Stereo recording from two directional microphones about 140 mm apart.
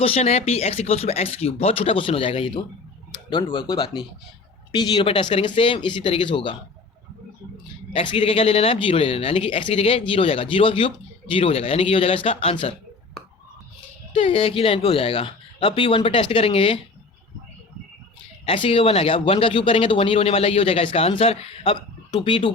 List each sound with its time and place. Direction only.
0.0 s speech: 45° left (ahead or behind)
7.9 s speech: 40° left (ahead or behind)
14.1 s speech: 40° left (ahead or behind)
18.4 s speech: 40° left (ahead or behind)